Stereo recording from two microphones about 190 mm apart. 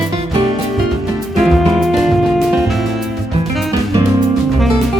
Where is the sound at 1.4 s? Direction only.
Centre (ahead or behind).